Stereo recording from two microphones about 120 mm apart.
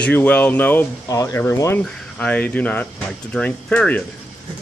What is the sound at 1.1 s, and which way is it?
Speech, 25° left (ahead or behind).